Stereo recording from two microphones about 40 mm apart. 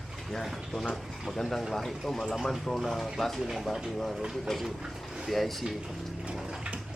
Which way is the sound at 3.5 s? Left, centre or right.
Centre.